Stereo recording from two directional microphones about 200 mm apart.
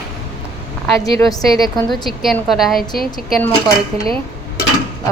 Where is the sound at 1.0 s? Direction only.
20° left (ahead or behind).